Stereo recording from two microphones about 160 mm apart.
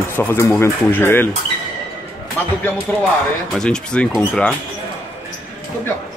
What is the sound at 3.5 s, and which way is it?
Speech, 5° left (ahead or behind).